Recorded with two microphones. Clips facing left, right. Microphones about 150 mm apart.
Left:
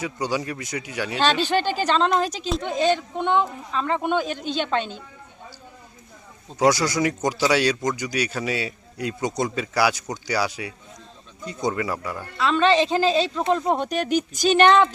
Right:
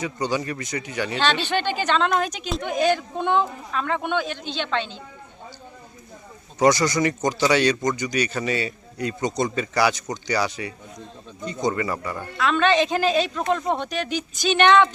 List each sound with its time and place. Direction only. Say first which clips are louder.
0.0 s speech: right 1 dB; 5° left (ahead or behind)
1.2 s a woman's voice: left 3 dB; 40° left (ahead or behind)
2.0 s speech: left 1 dB; centre (ahead or behind)
2.2 s a woman's voice: left 1 dB; 30° left (ahead or behind)
3.8 s speech: left 2 dB; centre (ahead or behind)
4.1 s speech: left 2 dB; 40° left (ahead or behind)
6.6 s speech: right 1 dB; 5° left (ahead or behind)
12.6 s a woman's voice: left 2 dB; 30° left (ahead or behind)
13.7 s speech: left 4 dB; 45° left (ahead or behind)